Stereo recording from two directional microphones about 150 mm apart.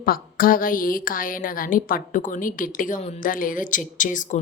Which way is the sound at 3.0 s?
45° left (ahead or behind).